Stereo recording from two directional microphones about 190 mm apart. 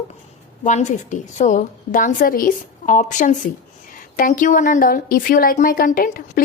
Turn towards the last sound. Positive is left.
turn(degrees=50)  # may be behind; listen again after turning